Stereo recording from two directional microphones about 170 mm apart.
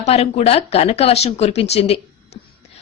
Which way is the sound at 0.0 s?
40° left (ahead or behind).